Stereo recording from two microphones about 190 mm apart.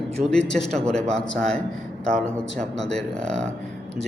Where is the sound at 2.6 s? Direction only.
5° left (ahead or behind).